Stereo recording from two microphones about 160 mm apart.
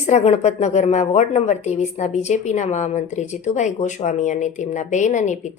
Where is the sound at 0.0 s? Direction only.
45° left (ahead or behind).